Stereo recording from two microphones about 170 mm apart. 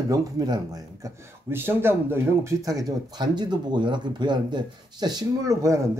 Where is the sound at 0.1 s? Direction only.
20° right (ahead or behind).